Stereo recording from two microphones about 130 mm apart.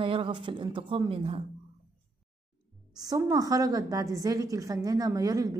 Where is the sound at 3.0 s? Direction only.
30° right (ahead or behind).